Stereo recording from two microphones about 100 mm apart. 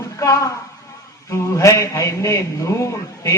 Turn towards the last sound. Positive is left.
turn(degrees=30)  # may be behind; listen again after turning